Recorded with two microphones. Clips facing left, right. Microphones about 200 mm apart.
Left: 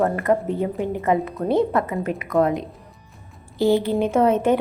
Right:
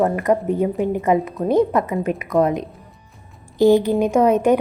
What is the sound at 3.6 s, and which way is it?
Speech, 15° right (ahead or behind).